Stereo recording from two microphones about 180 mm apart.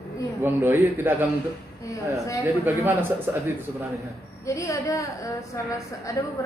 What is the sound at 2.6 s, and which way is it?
Speech, 10° right (ahead or behind).